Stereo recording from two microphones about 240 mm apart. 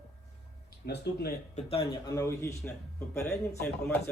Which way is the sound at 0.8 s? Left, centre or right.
Left.